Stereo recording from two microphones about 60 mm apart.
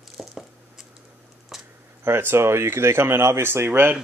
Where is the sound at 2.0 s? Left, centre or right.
Right.